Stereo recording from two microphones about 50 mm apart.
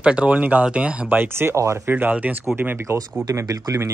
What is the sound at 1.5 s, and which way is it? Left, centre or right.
Speech, right.